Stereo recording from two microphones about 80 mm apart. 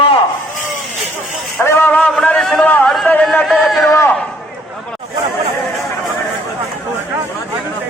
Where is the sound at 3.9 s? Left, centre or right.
Left.